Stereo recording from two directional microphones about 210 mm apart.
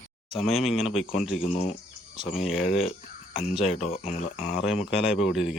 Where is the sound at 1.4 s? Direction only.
30° left (ahead or behind).